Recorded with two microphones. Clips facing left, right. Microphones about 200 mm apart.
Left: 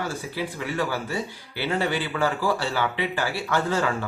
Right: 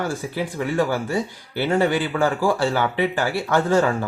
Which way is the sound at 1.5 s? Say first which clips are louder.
Right 6 dB; 50° right (ahead or behind).